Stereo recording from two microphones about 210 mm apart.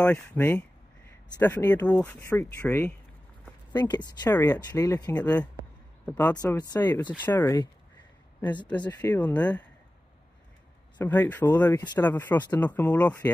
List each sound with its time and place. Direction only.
0.0 s speech: 10° left (ahead or behind)
8.8 s speech: 10° left (ahead or behind)
11.0 s speech: 10° left (ahead or behind)